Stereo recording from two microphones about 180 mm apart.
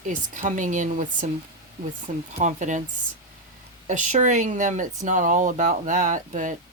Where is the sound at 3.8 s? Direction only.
40° right (ahead or behind).